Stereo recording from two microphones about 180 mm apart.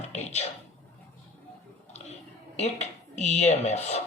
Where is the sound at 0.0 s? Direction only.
40° left (ahead or behind).